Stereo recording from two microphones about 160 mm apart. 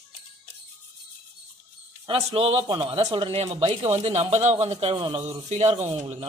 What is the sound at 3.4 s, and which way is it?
Speech, 40° right (ahead or behind).